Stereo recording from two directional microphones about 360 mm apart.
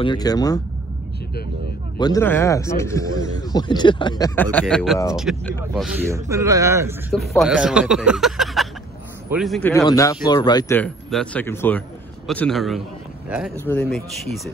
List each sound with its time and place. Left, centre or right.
0.0 s speech: centre
2.0 s speech: centre